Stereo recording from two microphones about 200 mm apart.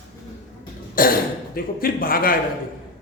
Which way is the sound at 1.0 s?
45° left (ahead or behind).